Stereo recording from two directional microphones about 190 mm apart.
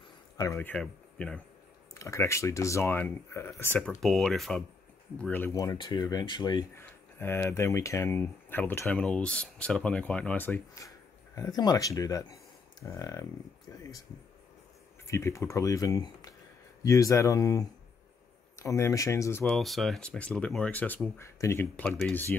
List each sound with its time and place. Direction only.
0.4 s speech: 10° left (ahead or behind)
3.9 s speech: centre (ahead or behind); by 13.2 s 15° left (ahead or behind)
15.0 s speech: 15° left (ahead or behind)
19.4 s speech: centre (ahead or behind)